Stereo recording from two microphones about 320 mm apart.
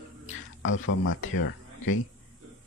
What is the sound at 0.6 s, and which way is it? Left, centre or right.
Speech, left.